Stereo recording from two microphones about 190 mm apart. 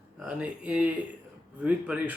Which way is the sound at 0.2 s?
5° right (ahead or behind).